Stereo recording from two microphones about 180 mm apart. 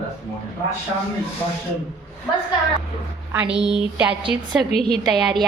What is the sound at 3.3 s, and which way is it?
A woman's voice, 10° right (ahead or behind).